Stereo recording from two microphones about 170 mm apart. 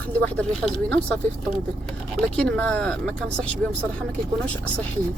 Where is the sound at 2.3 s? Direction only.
5° left (ahead or behind).